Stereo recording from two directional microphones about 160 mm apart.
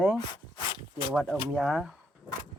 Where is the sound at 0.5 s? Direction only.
30° left (ahead or behind).